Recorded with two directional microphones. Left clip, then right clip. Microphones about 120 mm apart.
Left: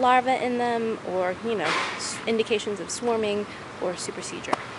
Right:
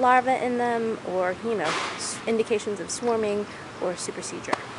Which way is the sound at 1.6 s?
25° left (ahead or behind).